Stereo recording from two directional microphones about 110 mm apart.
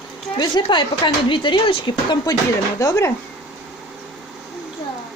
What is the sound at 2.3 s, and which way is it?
Speech, 35° left (ahead or behind).